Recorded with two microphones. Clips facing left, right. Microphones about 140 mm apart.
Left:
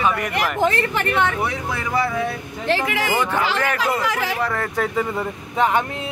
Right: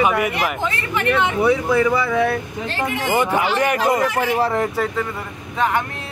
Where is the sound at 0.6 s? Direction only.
45° left (ahead or behind).